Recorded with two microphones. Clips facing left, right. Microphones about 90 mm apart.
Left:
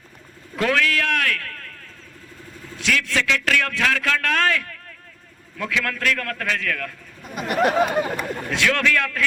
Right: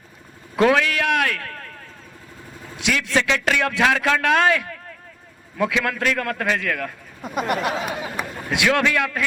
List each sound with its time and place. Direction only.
0.5 s a man's voice: 20° right (ahead or behind)
2.7 s a man's voice: 20° right (ahead or behind)
7.2 s speech: 50° right (ahead or behind)
7.6 s speech: 55° left (ahead or behind)
8.4 s a man's voice: 15° right (ahead or behind)